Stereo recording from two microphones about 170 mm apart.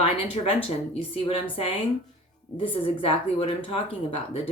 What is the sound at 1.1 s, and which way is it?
Speech, 35° left (ahead or behind).